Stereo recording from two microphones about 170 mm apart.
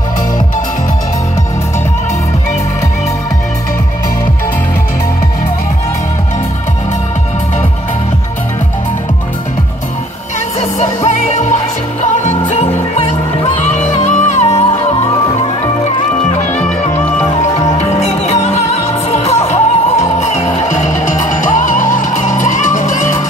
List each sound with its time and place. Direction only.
10.8 s music: 45° left (ahead or behind)
13.7 s music: 45° left (ahead or behind)
16.5 s music: 5° left (ahead or behind)
17.4 s music: 40° left (ahead or behind)